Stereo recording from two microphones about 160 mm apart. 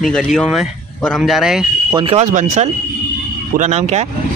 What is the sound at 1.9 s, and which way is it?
Speech, 40° right (ahead or behind).